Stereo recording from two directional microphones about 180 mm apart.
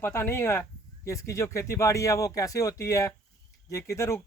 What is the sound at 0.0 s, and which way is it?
Speech, 15° left (ahead or behind).